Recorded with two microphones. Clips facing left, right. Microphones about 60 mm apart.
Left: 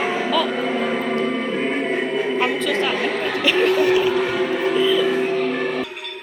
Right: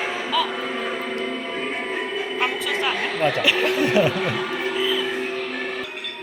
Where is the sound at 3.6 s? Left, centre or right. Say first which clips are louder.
Left 4 dB; left.